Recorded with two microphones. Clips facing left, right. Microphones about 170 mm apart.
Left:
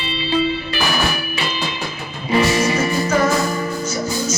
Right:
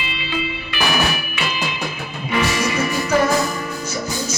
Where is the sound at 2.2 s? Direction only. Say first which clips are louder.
Left 4 dB; 35° left (ahead or behind).